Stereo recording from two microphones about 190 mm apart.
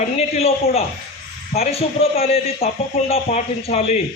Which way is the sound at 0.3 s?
30° left (ahead or behind).